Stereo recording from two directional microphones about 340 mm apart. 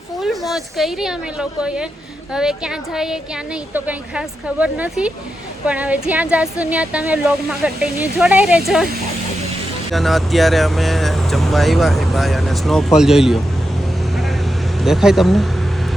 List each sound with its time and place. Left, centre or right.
0.2 s speech: centre
9.9 s speech: centre
14.8 s speech: centre